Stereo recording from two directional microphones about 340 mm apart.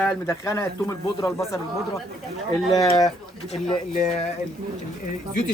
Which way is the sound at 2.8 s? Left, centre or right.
Centre.